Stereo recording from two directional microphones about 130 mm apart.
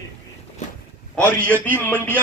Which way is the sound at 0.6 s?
70° left (ahead or behind).